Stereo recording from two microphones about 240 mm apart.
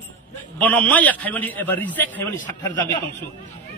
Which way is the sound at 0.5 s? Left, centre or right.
Centre.